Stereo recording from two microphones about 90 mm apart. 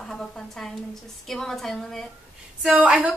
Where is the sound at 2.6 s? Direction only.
15° right (ahead or behind).